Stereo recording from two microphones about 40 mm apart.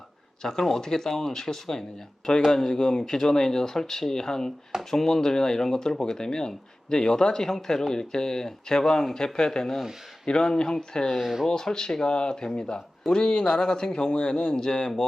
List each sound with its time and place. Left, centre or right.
0.6 s speech: centre
11.2 s speech: centre
11.4 s speech: centre